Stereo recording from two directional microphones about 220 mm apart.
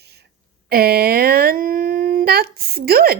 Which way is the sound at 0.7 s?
45° right (ahead or behind).